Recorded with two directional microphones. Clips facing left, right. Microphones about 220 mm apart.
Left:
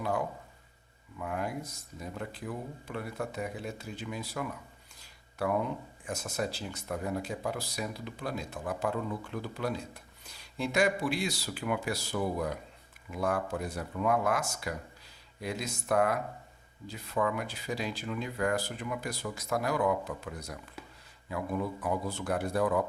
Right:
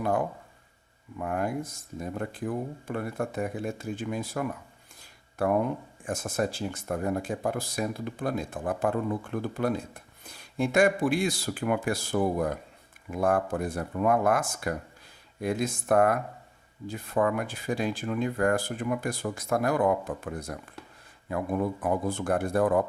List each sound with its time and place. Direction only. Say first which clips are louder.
0.0 s speech: right 5 dB; 50° right (ahead or behind)
4.9 s a sound: right 5 dB; 50° right (ahead or behind)
6.1 s speech: right 5 dB; 50° right (ahead or behind)